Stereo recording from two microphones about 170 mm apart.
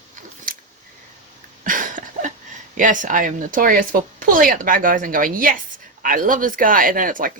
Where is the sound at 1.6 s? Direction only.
50° right (ahead or behind).